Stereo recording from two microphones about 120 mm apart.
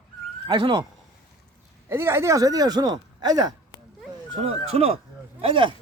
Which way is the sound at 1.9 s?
20° right (ahead or behind).